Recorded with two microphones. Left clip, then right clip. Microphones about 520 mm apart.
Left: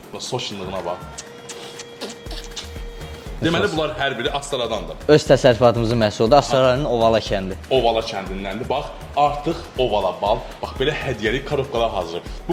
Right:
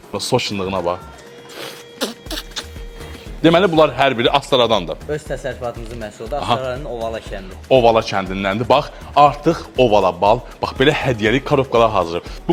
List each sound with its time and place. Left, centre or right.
0.2 s a man's voice: right
2.0 s music: right
3.4 s a man's voice: right
5.0 s speech: left
7.7 s a man's voice: right